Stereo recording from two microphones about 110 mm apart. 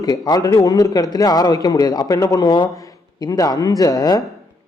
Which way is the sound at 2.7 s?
30° left (ahead or behind).